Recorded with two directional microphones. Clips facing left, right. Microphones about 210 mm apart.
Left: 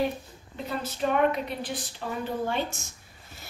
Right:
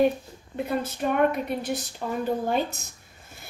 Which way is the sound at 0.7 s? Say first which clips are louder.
Right 1 dB; 55° right (ahead or behind).